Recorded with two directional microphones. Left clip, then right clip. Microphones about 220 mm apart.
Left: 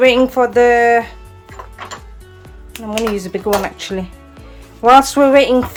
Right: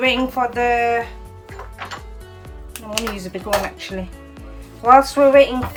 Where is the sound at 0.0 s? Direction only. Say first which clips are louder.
Left 7 dB; 25° left (ahead or behind).